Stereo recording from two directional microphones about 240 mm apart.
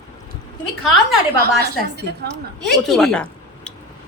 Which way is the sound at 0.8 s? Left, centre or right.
Centre.